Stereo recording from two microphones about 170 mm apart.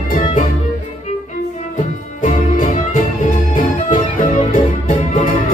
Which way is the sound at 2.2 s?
45° left (ahead or behind).